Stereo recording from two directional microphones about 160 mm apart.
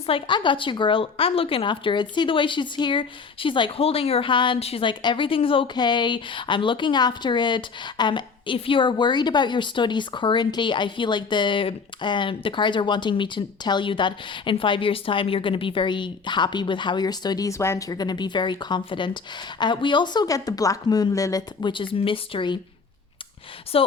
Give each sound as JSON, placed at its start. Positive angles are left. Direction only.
{"t": 0.0, "sound": "a woman's voice", "side_deg": 30}
{"t": 23.7, "sound": "speech", "side_deg": 35}